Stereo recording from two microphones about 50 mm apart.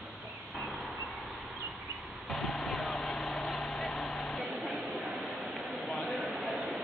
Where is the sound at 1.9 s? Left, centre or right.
Right.